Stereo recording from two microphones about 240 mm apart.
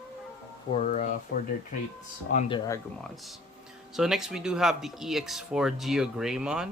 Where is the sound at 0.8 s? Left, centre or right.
Left.